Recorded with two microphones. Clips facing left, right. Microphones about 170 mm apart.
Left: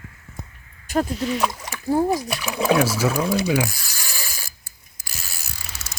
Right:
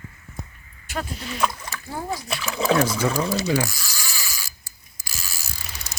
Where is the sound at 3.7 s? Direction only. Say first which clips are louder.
Left 1 dB; 60° left (ahead or behind).